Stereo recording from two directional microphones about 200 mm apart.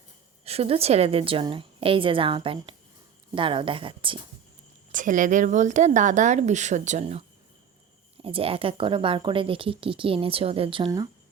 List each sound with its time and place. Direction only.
0.4 s speech: 30° right (ahead or behind)
4.9 s speech: 40° right (ahead or behind); by 11.1 s 20° right (ahead or behind)